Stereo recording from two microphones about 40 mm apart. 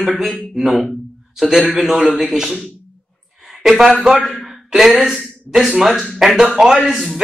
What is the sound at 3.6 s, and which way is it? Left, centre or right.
Speech, centre.